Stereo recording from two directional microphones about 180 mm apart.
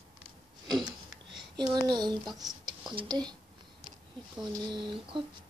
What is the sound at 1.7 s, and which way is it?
A child's voice, 25° right (ahead or behind).